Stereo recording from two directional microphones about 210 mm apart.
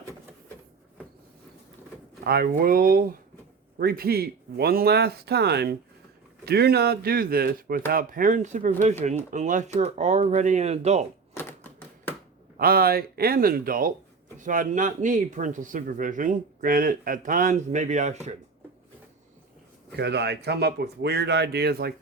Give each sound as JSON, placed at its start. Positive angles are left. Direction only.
{"t": 2.2, "sound": "speech", "side_deg": -45}
{"t": 11.3, "sound": "typewriter", "side_deg": 10}
{"t": 12.5, "sound": "speech", "side_deg": -45}
{"t": 20.0, "sound": "speech", "side_deg": -55}